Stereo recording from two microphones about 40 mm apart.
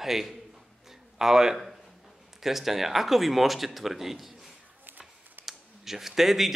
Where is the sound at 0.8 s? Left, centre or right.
Centre.